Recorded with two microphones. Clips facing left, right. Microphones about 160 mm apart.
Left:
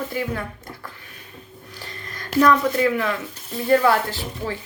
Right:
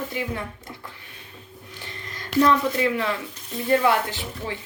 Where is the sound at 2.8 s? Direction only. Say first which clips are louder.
Left 3 dB; 25° right (ahead or behind).